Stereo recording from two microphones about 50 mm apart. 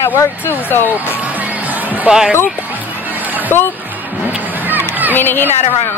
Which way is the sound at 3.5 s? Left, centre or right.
Left.